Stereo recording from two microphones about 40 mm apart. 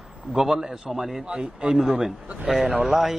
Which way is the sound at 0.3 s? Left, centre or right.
Centre.